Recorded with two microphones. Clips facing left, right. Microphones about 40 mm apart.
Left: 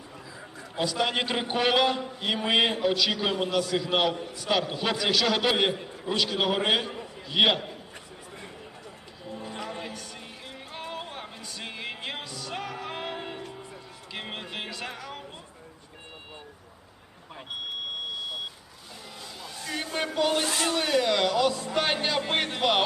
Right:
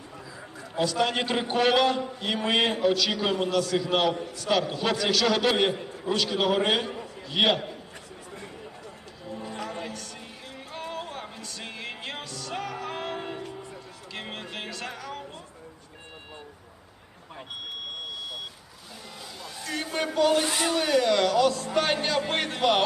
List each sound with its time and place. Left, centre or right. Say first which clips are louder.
0.9 s a man's voice: right 1 dB; centre
9.2 s a sound: right 1 dB; centre
10.7 s music: right 2 dB; centre
19.4 s a sound: right 1 dB; centre
20.1 s a man's voice: right 4 dB; centre
20.4 s speech: right 1 dB; right
20.7 s a man's voice: right 3 dB; centre